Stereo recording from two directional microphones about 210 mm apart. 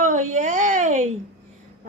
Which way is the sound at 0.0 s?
35° right (ahead or behind).